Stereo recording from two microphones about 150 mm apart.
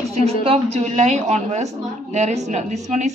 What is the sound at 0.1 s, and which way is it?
A woman's voice, 45° right (ahead or behind).